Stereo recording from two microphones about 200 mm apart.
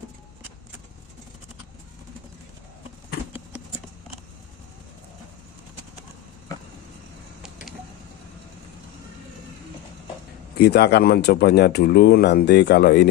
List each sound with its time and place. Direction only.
10.6 s speech: 55° left (ahead or behind)